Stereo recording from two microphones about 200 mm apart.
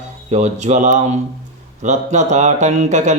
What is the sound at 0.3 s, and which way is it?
Speech, 35° right (ahead or behind).